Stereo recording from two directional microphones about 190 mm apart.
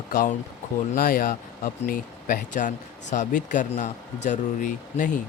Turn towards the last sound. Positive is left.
turn(degrees=45)  # may be behind; listen again after turning